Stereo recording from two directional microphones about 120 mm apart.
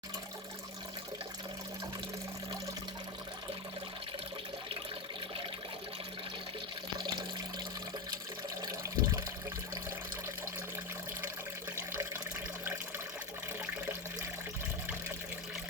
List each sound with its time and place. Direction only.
8.6 s water: 30° right (ahead or behind)